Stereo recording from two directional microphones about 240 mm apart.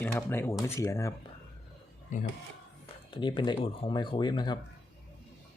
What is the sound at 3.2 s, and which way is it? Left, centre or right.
Speech, centre.